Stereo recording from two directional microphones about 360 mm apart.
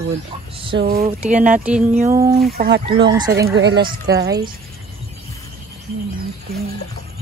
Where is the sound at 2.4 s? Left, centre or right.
Right.